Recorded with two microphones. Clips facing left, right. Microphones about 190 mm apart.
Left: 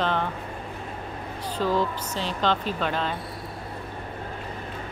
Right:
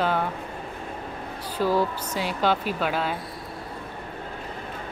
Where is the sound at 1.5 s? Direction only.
10° right (ahead or behind).